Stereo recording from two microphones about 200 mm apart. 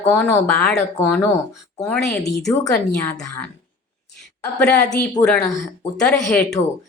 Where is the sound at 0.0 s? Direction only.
10° left (ahead or behind).